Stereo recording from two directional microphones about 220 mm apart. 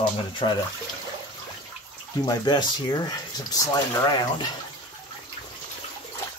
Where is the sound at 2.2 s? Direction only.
20° left (ahead or behind).